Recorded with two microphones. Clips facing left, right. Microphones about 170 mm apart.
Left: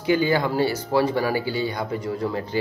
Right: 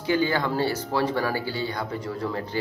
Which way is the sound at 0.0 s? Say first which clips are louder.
Left 3 dB; 15° left (ahead or behind).